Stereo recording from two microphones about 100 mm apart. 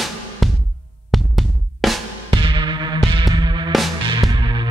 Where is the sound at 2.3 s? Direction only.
55° right (ahead or behind).